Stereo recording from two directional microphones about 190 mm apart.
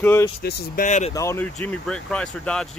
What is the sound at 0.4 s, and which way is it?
Speech, 55° left (ahead or behind).